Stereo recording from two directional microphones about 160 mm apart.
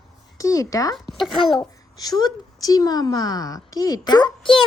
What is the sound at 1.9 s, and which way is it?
A woman's voice, 25° left (ahead or behind).